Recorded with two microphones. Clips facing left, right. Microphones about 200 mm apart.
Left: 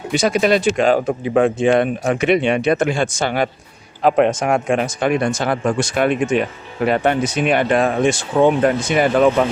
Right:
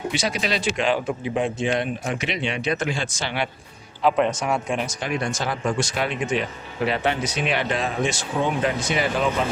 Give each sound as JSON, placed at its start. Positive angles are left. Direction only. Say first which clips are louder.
{"t": 0.1, "sound": "speech", "louder": "left 13 dB", "side_deg": 50}
{"t": 1.3, "sound": "speech", "louder": "left 10 dB", "side_deg": 55}